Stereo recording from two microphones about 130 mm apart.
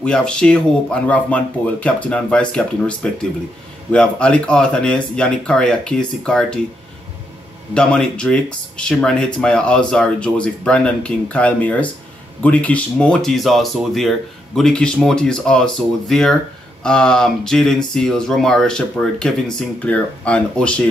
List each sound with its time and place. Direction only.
0.0 s speech: 5° left (ahead or behind)
7.7 s speech: 5° left (ahead or behind)